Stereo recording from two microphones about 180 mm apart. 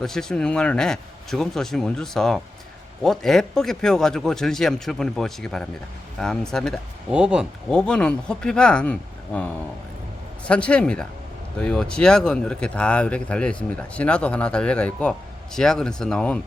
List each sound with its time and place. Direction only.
0.0 s speech: 5° left (ahead or behind)